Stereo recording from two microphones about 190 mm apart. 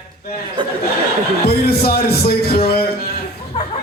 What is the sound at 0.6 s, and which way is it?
Speech, 25° right (ahead or behind).